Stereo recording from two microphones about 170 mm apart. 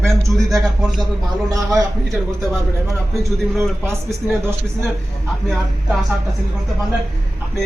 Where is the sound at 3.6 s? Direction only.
15° right (ahead or behind).